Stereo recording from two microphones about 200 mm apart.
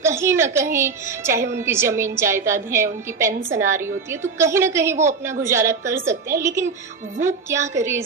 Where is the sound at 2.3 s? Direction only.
40° right (ahead or behind).